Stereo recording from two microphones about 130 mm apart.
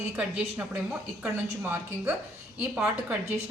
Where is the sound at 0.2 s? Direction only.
10° right (ahead or behind).